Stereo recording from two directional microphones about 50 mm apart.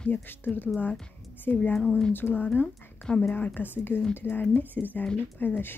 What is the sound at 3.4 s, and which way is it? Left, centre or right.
Speech, left.